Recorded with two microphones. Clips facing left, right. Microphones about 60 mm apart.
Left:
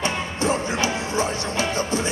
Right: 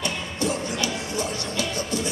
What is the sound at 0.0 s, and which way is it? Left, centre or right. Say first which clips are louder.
Music: left 3 dB; left.